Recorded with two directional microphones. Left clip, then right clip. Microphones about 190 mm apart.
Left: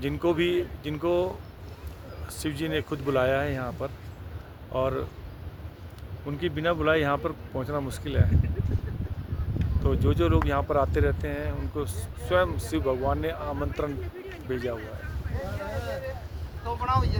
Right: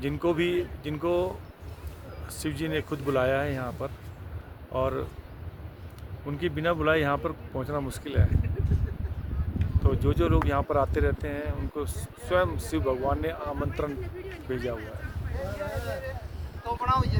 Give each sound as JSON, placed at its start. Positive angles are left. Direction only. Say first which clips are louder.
{"t": 0.0, "sound": "speech", "louder": "left 1 dB", "side_deg": 0}
{"t": 2.4, "sound": "speech", "louder": "left 1 dB", "side_deg": 0}
{"t": 6.2, "sound": "speech", "louder": "left 1 dB", "side_deg": -10}
{"t": 9.8, "sound": "speech", "louder": "left 1 dB", "side_deg": 0}
{"t": 15.6, "sound": "a sound", "louder": "left 1 dB", "side_deg": -35}
{"t": 16.6, "sound": "boat", "louder": "right 1 dB", "side_deg": -35}